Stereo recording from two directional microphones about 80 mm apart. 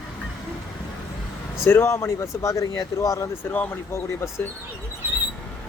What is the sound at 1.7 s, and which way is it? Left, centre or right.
Speech, left.